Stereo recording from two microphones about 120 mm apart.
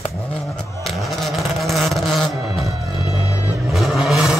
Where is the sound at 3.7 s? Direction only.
Centre (ahead or behind).